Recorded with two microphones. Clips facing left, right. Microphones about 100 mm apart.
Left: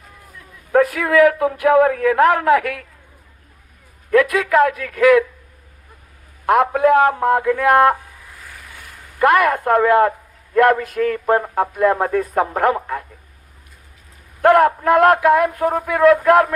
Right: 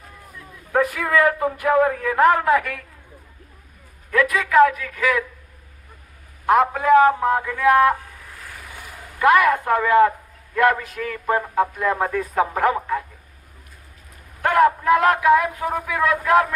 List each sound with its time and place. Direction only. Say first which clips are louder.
0.7 s a man's voice: left 4 dB; 65° left (ahead or behind)
4.1 s a man's voice: left 3 dB; 55° left (ahead or behind)
6.4 s a man's voice: left 3 dB; 60° left (ahead or behind)
8.4 s vehicle: right 2 dB; 5° right (ahead or behind)
9.1 s a man's voice: left 1 dB; 55° left (ahead or behind)
14.4 s a man's voice: left 4 dB; 55° left (ahead or behind)